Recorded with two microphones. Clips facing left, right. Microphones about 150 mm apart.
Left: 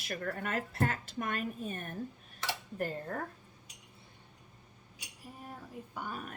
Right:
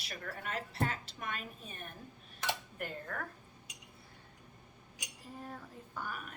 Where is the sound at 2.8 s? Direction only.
35° left (ahead or behind).